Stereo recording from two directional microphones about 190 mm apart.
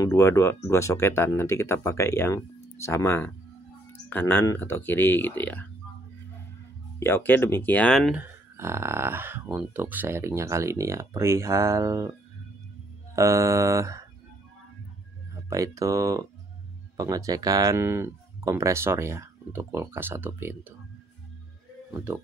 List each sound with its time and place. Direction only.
0.0 s speech: 15° left (ahead or behind)
7.0 s speech: 10° left (ahead or behind)
8.2 s speech: 15° right (ahead or behind)
13.1 s speech: 15° right (ahead or behind)
15.3 s speech: 15° right (ahead or behind)